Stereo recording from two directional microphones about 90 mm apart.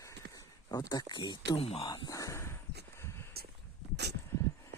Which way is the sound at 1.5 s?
90° left.